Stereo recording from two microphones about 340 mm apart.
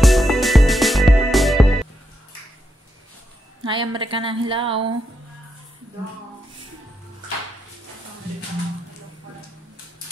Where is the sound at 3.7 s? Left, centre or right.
Centre.